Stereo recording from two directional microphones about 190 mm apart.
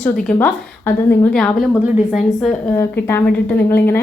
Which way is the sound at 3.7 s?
10° left (ahead or behind).